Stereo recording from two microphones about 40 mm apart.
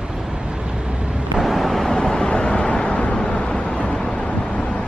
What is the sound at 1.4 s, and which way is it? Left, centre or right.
Vehicle, centre.